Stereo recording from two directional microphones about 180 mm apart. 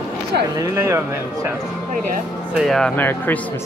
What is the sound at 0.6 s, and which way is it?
Speech, 15° right (ahead or behind).